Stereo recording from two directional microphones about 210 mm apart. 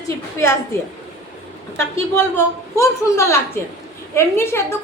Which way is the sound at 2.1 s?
10° left (ahead or behind).